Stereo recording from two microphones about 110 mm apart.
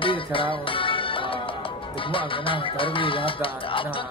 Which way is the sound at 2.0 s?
50° left (ahead or behind).